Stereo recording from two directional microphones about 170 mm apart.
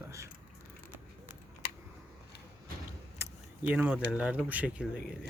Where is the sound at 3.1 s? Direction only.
15° right (ahead or behind).